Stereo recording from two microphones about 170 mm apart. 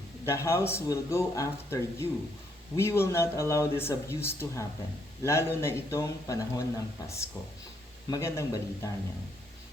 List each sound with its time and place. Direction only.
0.3 s speech: 15° left (ahead or behind)